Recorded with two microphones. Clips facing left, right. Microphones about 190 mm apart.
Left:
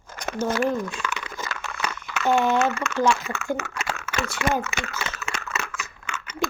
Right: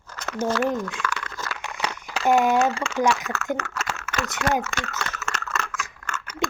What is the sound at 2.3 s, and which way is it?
Speech, 35° right (ahead or behind).